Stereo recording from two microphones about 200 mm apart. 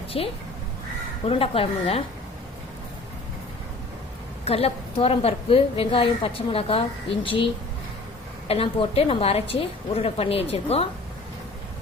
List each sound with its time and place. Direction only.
0.1 s a woman's voice: 30° left (ahead or behind)
4.4 s a woman's voice: 30° left (ahead or behind)
8.4 s a woman's voice: 30° left (ahead or behind)